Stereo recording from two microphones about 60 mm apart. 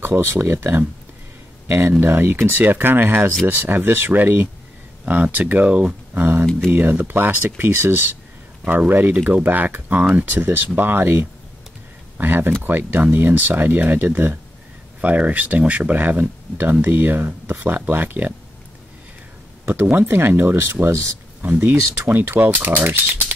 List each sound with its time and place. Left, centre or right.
0.0 s speech: right; by 5.9 s centre
6.1 s speech: right
19.6 s speech: right
21.4 s speech: right